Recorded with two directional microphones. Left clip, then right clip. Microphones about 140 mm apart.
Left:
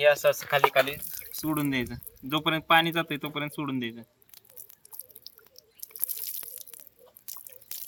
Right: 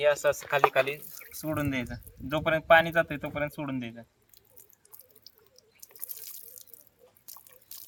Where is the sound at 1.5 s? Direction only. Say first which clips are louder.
Left 2 dB; 35° right (ahead or behind).